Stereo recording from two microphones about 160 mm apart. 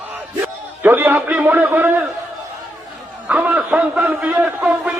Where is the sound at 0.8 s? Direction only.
10° right (ahead or behind).